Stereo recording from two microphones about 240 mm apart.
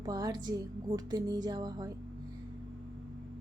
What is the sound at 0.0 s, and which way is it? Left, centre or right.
Music, centre.